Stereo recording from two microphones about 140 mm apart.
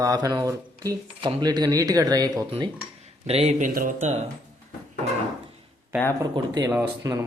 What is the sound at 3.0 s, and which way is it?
Speech, 45° right (ahead or behind).